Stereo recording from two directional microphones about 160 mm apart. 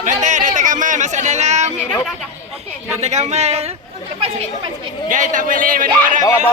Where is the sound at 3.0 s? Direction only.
45° right (ahead or behind).